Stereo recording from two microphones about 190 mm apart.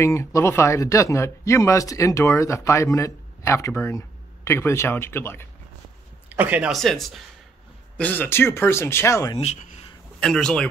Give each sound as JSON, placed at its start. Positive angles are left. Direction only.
{"t": 0.0, "sound": "speech", "side_deg": 15}
{"t": 6.2, "sound": "speech", "side_deg": -10}
{"t": 9.4, "sound": "speech", "side_deg": 35}
{"t": 10.2, "sound": "speech", "side_deg": 5}